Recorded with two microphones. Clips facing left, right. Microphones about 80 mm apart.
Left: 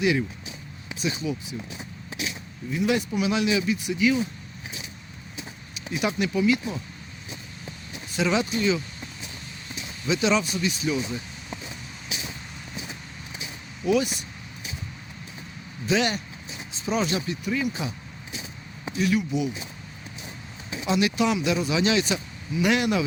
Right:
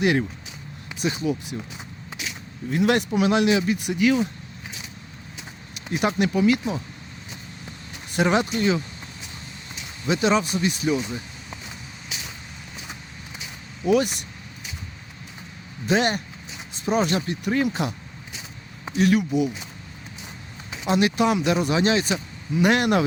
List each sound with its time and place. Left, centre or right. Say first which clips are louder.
0.0 s speech: right 2 dB; right
2.6 s speech: right 4 dB; right
3.2 s speech: right 4 dB; right
5.9 s speech: right 3 dB; right
8.1 s speech: right 3 dB; right
10.1 s speech: right 2 dB; right
13.8 s speech: right 3 dB; right
15.9 s speech: right 3 dB; right
18.9 s speech: right 4 dB; right
20.8 s speech: right 3 dB; right